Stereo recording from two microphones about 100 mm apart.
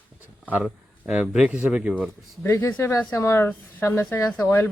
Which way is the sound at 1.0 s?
10° right (ahead or behind).